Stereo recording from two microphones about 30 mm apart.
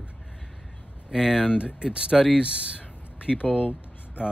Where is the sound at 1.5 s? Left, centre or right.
Right.